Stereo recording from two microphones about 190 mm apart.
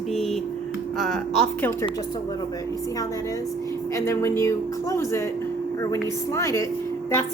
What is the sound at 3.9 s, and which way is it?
A woman's voice, 15° left (ahead or behind).